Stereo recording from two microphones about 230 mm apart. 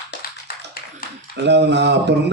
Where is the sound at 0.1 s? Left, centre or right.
Left.